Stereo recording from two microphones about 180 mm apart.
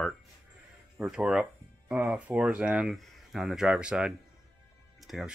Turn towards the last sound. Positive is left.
turn(degrees=0)  # may be behind; listen again after turning